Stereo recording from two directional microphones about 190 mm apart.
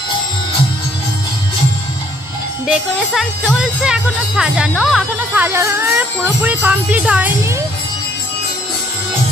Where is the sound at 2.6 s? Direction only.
Centre (ahead or behind).